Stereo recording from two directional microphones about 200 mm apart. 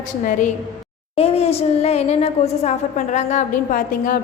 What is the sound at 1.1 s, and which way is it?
A woman's voice, 30° left (ahead or behind).